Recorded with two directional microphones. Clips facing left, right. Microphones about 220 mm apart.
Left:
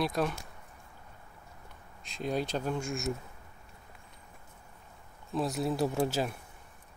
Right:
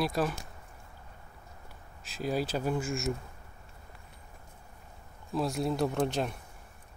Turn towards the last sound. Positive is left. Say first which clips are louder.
# even
turn(degrees=5)  # may be behind; listen again after turning